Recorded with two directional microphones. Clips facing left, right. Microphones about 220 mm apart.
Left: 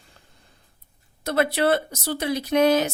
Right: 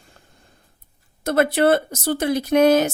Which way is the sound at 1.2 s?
50° right (ahead or behind).